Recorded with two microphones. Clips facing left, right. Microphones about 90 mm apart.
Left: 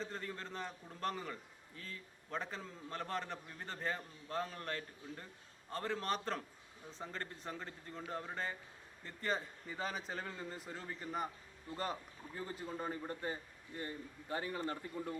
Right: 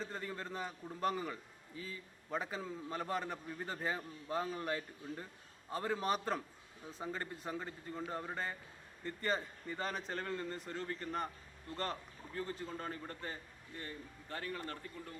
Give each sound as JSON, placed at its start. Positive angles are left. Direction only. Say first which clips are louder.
{"t": 0.0, "sound": "a man's voice", "louder": "right 1 dB", "side_deg": -5}